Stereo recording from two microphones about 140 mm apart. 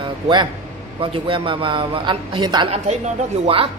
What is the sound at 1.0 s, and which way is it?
A man's voice, 40° right (ahead or behind).